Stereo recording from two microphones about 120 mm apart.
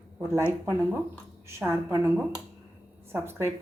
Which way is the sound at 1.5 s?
20° right (ahead or behind).